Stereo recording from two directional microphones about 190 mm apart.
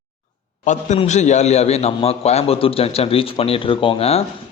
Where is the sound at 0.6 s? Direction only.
40° left (ahead or behind).